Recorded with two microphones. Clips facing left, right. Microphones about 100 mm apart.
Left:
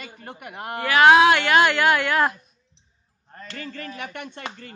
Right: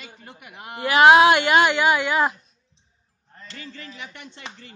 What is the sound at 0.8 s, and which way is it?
A woman's voice, 15° right (ahead or behind).